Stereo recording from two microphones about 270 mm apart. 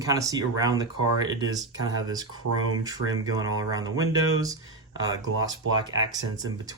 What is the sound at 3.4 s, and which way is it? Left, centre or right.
Speech, right.